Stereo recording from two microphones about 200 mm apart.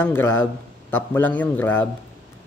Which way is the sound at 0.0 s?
10° left (ahead or behind).